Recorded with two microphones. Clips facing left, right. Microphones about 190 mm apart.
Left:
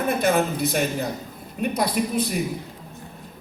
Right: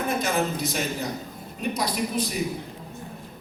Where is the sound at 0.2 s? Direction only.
60° left (ahead or behind).